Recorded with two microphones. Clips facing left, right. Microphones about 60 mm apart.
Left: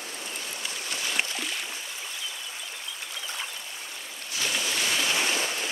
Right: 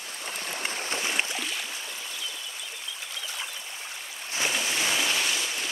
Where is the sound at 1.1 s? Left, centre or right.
Centre.